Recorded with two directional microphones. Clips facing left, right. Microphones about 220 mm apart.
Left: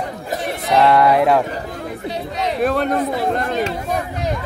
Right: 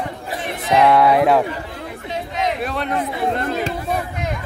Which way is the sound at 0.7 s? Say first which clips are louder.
Even; centre (ahead or behind).